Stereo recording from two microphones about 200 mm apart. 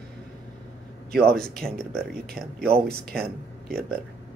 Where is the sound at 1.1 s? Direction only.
50° right (ahead or behind).